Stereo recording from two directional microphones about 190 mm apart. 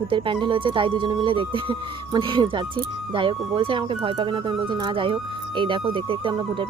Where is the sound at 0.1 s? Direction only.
25° right (ahead or behind).